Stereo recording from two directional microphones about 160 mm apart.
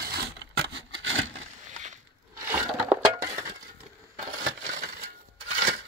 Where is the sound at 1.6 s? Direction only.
50° right (ahead or behind).